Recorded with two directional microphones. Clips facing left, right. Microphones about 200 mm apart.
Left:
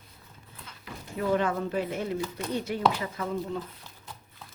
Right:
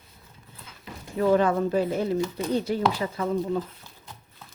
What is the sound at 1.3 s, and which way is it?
Speech, 35° right (ahead or behind).